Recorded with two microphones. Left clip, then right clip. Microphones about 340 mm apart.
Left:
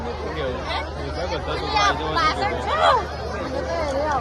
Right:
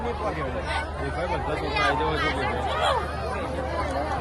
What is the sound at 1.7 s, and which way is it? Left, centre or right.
Speech, centre.